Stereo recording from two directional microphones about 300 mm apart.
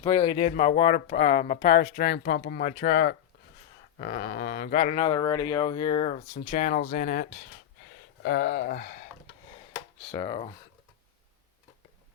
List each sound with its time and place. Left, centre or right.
0.0 s speech: centre
10.0 s speech: centre